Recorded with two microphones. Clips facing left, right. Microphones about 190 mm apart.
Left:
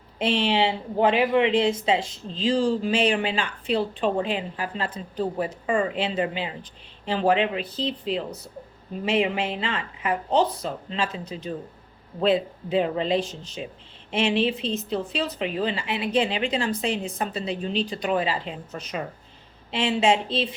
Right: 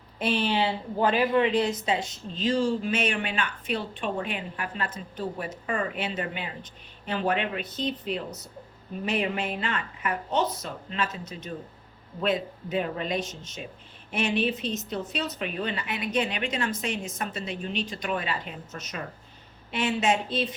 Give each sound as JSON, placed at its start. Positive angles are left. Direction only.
{"t": 0.2, "sound": "a woman's voice", "side_deg": 25}